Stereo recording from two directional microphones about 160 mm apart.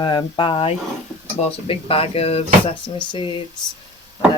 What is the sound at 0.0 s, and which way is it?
Speech, 30° left (ahead or behind).